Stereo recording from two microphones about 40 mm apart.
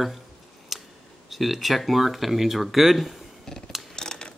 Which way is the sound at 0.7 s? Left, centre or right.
Centre.